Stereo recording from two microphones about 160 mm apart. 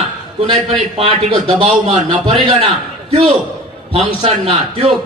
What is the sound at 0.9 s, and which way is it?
A man's voice, 35° right (ahead or behind).